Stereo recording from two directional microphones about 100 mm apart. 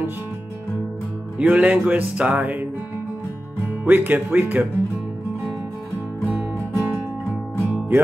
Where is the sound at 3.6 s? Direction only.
20° right (ahead or behind).